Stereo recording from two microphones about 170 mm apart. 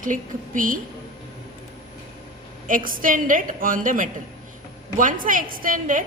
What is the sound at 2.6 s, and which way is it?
A woman's voice, 55° right (ahead or behind).